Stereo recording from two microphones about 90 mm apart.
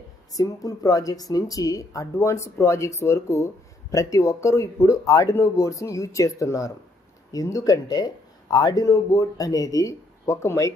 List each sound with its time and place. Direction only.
0.3 s speech: 40° left (ahead or behind)